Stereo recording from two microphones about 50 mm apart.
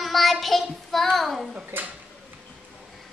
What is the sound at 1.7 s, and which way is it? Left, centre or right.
Speech, right.